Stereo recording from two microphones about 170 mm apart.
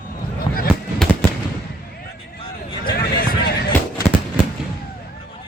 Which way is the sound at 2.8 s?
60° left (ahead or behind).